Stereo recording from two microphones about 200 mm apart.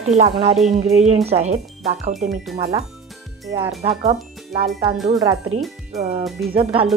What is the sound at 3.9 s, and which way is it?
Speech, 30° right (ahead or behind).